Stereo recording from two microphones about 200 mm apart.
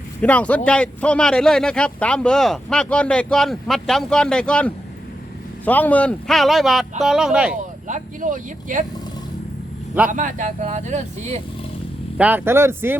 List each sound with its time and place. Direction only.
0.2 s speech: 5° left (ahead or behind)
7.9 s speech: 40° right (ahead or behind)
10.1 s speech: 40° right (ahead or behind)
12.1 s speech: 10° right (ahead or behind)